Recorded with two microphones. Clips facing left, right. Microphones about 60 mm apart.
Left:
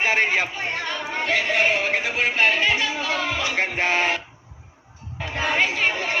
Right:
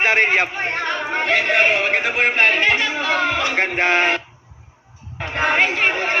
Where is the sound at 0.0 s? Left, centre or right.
Right.